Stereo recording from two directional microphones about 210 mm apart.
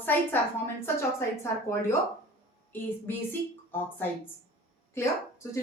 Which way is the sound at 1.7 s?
10° left (ahead or behind).